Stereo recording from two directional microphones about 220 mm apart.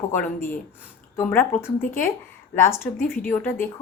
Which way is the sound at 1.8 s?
40° left (ahead or behind).